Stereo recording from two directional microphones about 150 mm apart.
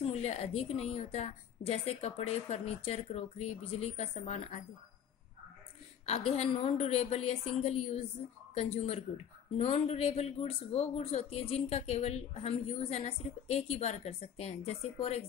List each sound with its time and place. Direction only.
0.1 s speech: 45° left (ahead or behind)
6.0 s speech: 45° left (ahead or behind)